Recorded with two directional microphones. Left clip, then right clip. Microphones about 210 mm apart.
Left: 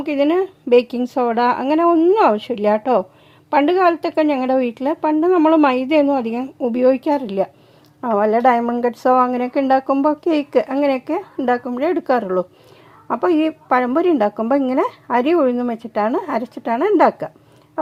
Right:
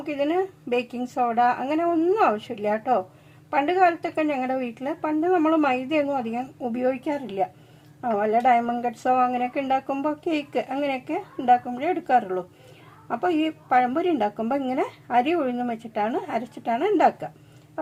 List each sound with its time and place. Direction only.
0.0 s a woman's voice: 45° left (ahead or behind)